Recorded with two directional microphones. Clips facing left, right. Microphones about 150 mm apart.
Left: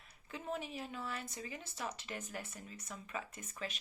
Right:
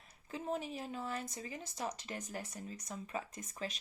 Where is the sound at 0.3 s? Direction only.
35° right (ahead or behind).